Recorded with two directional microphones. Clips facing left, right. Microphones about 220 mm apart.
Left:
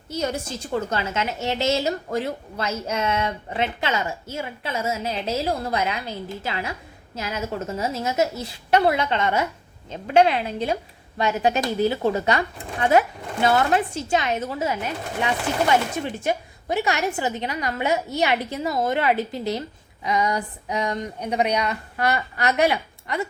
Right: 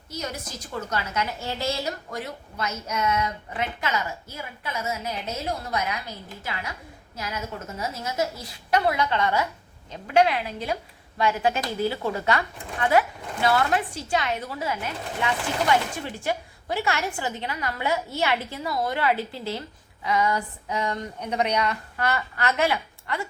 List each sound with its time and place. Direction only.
0.1 s a woman's voice: 30° left (ahead or behind)